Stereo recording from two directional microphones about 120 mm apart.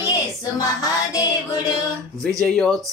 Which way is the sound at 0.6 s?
30° left (ahead or behind).